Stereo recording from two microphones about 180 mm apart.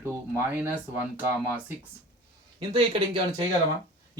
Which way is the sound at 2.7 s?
25° right (ahead or behind).